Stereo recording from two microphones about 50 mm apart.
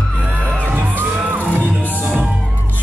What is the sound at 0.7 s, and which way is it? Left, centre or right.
Music, right.